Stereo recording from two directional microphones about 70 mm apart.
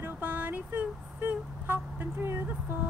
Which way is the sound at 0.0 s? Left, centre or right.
Right.